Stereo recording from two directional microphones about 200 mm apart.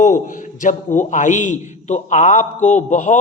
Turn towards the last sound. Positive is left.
turn(degrees=35)  # may be behind; listen again after turning